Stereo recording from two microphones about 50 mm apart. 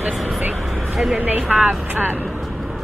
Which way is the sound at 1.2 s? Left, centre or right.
Right.